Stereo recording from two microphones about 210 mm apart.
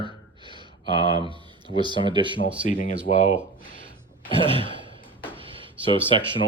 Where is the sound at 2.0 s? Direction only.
25° right (ahead or behind).